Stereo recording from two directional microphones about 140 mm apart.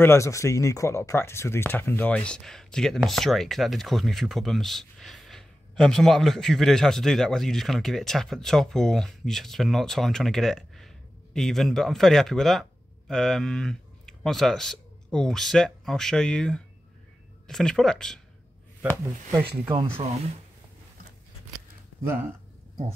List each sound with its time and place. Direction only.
0.0 s speech: 20° left (ahead or behind)
19.3 s speech: 15° right (ahead or behind)